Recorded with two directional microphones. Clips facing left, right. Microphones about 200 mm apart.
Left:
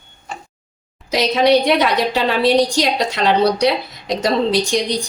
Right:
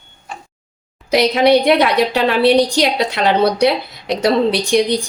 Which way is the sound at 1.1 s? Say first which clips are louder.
Right 2 dB; 60° right (ahead or behind).